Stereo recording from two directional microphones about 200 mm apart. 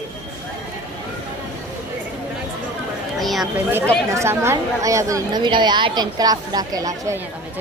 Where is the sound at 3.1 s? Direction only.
Centre (ahead or behind).